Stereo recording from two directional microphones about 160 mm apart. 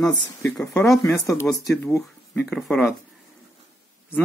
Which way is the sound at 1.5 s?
Centre (ahead or behind).